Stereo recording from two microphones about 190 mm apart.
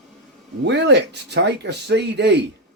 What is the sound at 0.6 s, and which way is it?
Speech, 65° right (ahead or behind).